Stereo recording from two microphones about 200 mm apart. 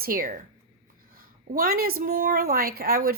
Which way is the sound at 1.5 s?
45° right (ahead or behind).